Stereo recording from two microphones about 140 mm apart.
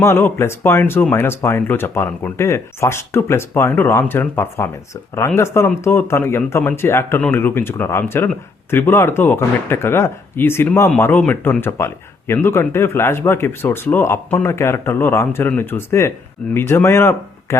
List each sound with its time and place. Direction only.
0.0 s speech: 20° left (ahead or behind)